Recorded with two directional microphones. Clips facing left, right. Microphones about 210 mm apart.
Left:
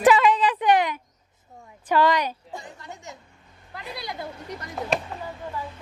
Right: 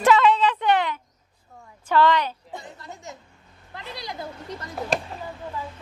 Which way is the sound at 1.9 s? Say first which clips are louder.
Right 1 dB; 15° left (ahead or behind).